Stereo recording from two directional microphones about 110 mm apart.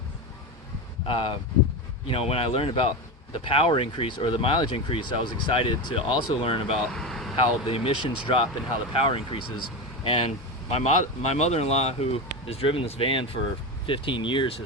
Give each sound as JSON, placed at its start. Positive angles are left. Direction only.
{"t": 1.0, "sound": "speech", "side_deg": 55}
{"t": 6.9, "sound": "vehicle", "side_deg": 5}
{"t": 7.7, "sound": "speech", "side_deg": 60}
{"t": 10.7, "sound": "speech", "side_deg": 80}